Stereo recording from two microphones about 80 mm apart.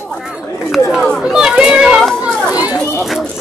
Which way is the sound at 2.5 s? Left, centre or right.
Centre.